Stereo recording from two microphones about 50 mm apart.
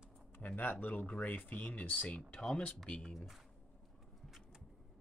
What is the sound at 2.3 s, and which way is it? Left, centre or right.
Speech, centre.